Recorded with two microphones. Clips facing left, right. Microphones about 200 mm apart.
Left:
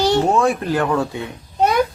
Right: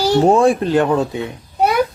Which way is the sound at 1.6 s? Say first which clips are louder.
Right 1 dB; 10° right (ahead or behind).